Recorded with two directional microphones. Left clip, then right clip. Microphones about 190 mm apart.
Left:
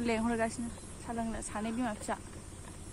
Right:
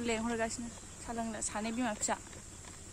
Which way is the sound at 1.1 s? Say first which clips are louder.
Left 1 dB; 25° right (ahead or behind).